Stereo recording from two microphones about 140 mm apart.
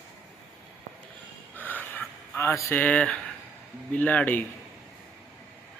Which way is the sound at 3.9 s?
10° left (ahead or behind).